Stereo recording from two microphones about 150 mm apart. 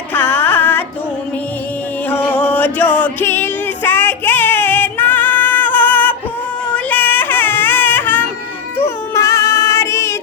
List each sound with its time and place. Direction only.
0.1 s music: 10° left (ahead or behind)
2.0 s music: 10° left (ahead or behind)
6.7 s a sound: 10° left (ahead or behind)
9.1 s music: 20° left (ahead or behind)